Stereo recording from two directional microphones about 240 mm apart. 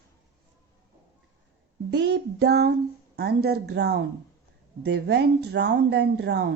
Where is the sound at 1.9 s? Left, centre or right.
Right.